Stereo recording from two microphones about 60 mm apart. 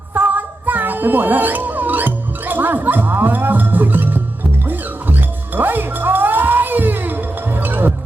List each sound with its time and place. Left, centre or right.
0.1 s music: right